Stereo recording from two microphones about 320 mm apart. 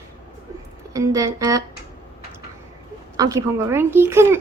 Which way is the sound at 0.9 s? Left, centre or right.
Centre.